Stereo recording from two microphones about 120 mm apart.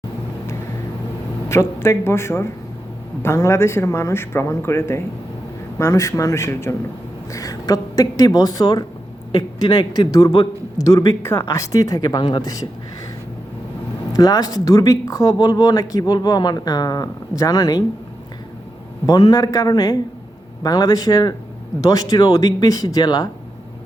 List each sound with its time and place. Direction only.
1.5 s a woman's voice: 25° left (ahead or behind)
14.1 s speech: 30° left (ahead or behind)
19.0 s speech: 30° left (ahead or behind)